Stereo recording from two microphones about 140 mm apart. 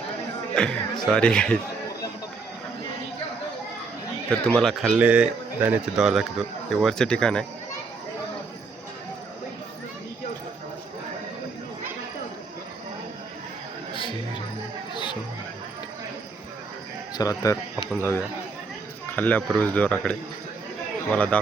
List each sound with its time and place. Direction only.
0.5 s speech: 5° left (ahead or behind)
4.3 s speech: 5° left (ahead or behind)
4.9 s a man's voice: 10° right (ahead or behind)
14.9 s chatter: 35° left (ahead or behind)
17.2 s speech: 25° left (ahead or behind); by 21.3 s 10° left (ahead or behind)